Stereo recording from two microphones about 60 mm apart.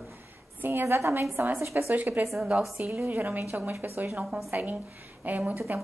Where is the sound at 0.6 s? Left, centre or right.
Right.